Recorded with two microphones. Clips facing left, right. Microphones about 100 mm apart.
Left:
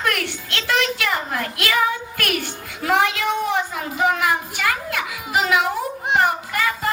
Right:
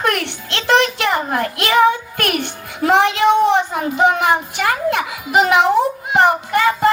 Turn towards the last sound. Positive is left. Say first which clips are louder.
# right 8 dB
turn(degrees=-30)  # may be behind; listen again after turning